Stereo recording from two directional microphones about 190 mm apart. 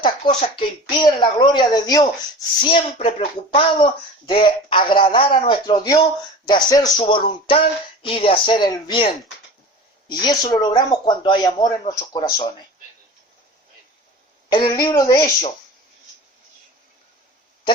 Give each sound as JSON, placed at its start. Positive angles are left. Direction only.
{"t": 0.0, "sound": "speech", "side_deg": 25}
{"t": 14.5, "sound": "speech", "side_deg": 20}